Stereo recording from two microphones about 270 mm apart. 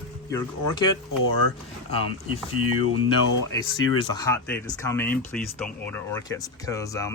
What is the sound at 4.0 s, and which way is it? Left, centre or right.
Speech, centre.